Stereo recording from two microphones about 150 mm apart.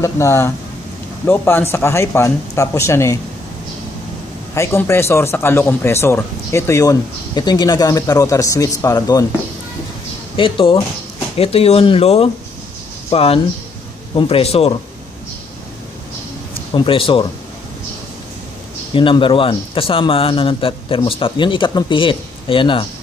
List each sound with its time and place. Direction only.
0.0 s speech: 20° left (ahead or behind)
4.6 s speech: 15° left (ahead or behind)
10.3 s a man's voice: 35° left (ahead or behind)
16.7 s a man's voice: 35° left (ahead or behind)
18.9 s a man's voice: 35° left (ahead or behind)